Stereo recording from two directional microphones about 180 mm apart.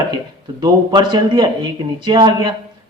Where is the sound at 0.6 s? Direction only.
25° right (ahead or behind).